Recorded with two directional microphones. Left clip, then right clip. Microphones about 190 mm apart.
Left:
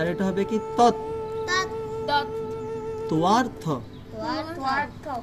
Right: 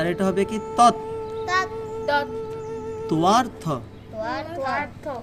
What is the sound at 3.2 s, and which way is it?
Speech, 35° right (ahead or behind).